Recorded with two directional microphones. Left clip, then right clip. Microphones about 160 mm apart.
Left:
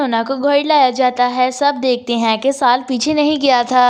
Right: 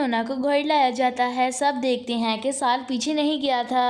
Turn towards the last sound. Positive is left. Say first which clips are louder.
# left 10 dB
turn(degrees=25)  # may be behind; listen again after turning